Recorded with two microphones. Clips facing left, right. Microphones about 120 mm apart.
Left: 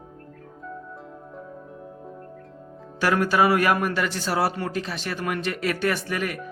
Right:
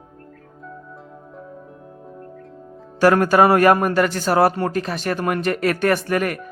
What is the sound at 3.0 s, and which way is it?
A man's voice, 50° right (ahead or behind).